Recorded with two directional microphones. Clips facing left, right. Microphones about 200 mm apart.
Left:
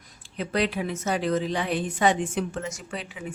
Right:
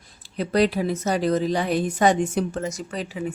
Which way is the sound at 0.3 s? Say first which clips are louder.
Right 5 dB; 40° right (ahead or behind).